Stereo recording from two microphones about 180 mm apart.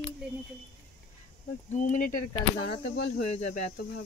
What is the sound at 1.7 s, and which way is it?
Speech, 45° left (ahead or behind).